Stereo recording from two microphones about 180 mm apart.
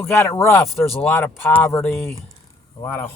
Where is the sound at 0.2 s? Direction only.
15° left (ahead or behind).